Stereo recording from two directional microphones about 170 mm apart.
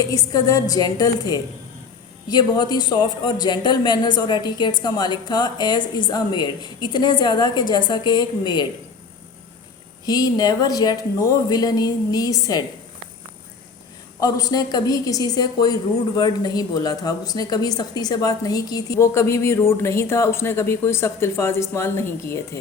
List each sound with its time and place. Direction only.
0.1 s a woman's voice: 20° left (ahead or behind)
10.1 s a woman's voice: 20° left (ahead or behind)
14.2 s a woman's voice: 20° left (ahead or behind)